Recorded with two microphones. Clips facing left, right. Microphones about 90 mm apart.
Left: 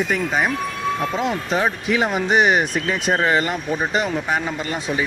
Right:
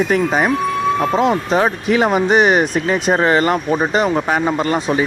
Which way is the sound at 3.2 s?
50° right (ahead or behind).